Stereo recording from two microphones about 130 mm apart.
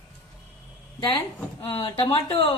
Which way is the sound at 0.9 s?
40° left (ahead or behind).